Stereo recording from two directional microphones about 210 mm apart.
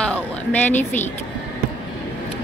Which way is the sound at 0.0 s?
5° left (ahead or behind).